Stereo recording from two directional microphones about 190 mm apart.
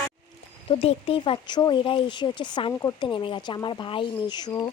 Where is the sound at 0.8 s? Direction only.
30° left (ahead or behind).